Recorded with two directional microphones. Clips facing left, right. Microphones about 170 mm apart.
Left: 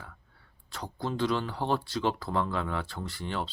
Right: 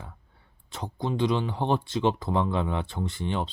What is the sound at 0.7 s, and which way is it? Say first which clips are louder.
Speech: right 3 dB; 20° right (ahead or behind).